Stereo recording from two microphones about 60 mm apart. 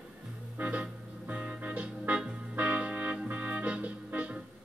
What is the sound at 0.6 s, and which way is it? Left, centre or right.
Music, right.